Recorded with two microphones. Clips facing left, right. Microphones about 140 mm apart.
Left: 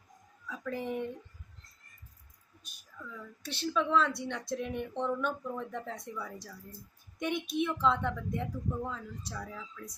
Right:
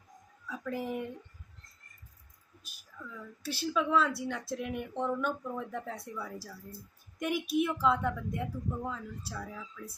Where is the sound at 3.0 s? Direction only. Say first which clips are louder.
Right 3 dB; 5° right (ahead or behind).